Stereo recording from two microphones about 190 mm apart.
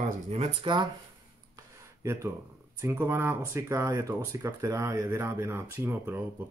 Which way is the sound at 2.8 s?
15° right (ahead or behind).